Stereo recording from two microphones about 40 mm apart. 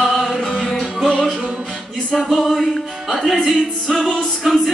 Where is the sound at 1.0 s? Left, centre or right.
Centre.